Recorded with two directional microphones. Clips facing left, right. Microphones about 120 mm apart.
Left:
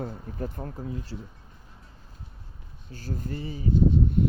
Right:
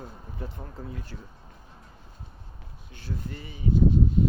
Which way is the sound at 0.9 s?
25° left (ahead or behind).